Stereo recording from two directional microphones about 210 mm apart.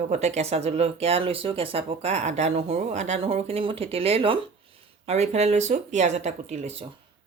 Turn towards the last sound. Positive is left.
turn(degrees=-30)  # may be behind; listen again after turning